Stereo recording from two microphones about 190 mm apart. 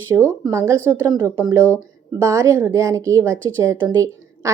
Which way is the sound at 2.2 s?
15° right (ahead or behind).